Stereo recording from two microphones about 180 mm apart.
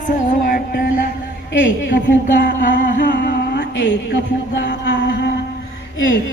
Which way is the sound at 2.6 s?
50° left (ahead or behind).